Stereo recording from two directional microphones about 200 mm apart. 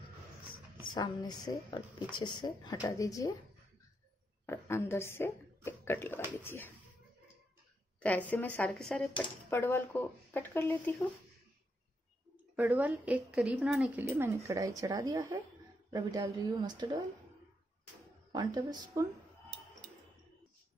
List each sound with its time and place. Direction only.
0.9 s speech: 20° left (ahead or behind)
4.5 s speech: 15° left (ahead or behind)
8.0 s speech: 10° left (ahead or behind)
12.5 s a woman's voice: 10° right (ahead or behind)
18.3 s speech: 20° right (ahead or behind)